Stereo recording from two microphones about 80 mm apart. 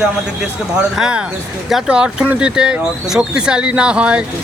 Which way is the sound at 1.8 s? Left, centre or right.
Centre.